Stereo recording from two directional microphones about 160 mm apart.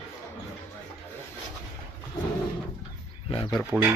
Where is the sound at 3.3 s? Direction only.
35° left (ahead or behind).